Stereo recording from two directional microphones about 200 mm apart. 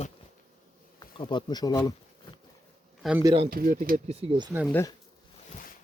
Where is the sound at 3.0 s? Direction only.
5° right (ahead or behind).